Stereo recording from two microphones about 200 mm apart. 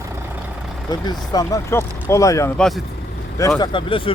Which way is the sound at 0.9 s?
20° left (ahead or behind).